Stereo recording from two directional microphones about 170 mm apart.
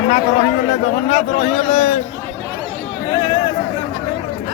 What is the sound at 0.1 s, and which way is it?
A man's voice, 45° left (ahead or behind).